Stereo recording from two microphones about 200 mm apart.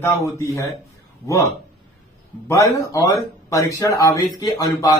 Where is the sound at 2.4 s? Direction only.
15° left (ahead or behind).